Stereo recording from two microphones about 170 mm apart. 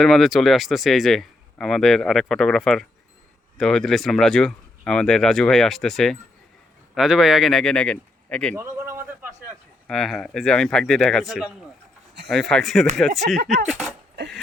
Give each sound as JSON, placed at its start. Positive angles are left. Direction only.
{"t": 0.0, "sound": "speech", "side_deg": 0}
{"t": 8.5, "sound": "a sound", "side_deg": -15}
{"t": 9.8, "sound": "speech", "side_deg": 0}
{"t": 13.2, "sound": "speech", "side_deg": -70}
{"t": 13.7, "sound": "speech", "side_deg": 0}